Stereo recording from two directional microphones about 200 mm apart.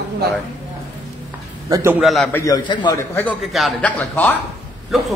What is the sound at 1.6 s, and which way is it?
Speech, 15° right (ahead or behind).